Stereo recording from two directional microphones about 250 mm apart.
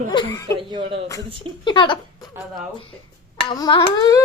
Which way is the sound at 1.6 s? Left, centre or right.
Centre.